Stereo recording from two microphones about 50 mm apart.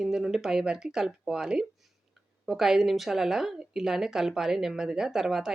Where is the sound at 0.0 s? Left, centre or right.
Centre.